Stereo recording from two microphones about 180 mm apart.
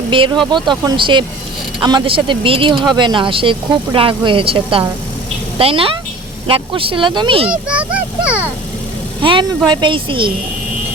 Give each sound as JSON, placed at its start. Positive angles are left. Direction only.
{"t": 0.1, "sound": "a woman's voice", "side_deg": -30}
{"t": 7.5, "sound": "speech", "side_deg": -5}
{"t": 9.2, "sound": "speech", "side_deg": -25}